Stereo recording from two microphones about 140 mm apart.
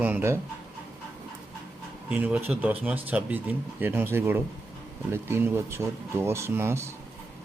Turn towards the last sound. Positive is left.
turn(degrees=-20)  # may be behind; listen again after turning